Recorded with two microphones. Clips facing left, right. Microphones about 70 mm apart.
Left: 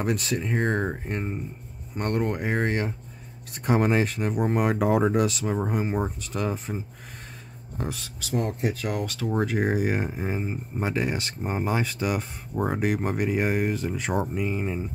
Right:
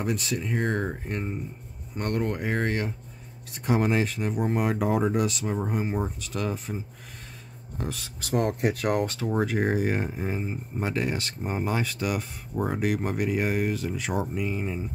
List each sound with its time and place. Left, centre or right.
0.0 s speech: left
3.5 s speech: left
4.7 s speech: left
6.2 s speech: left
7.8 s speech: left
8.2 s speech: right
9.3 s speech: centre; by 14.8 s left